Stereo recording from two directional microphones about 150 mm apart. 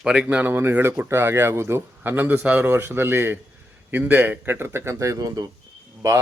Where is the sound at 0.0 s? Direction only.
5° right (ahead or behind).